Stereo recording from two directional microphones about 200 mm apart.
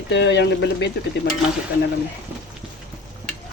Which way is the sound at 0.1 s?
60° left (ahead or behind).